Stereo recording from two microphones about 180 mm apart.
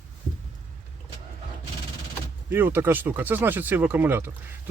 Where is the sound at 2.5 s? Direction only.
10° right (ahead or behind).